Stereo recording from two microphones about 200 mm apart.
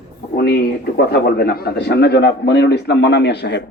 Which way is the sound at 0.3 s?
55° left (ahead or behind).